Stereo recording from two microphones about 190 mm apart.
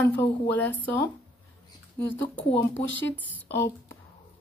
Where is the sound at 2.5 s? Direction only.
80° left.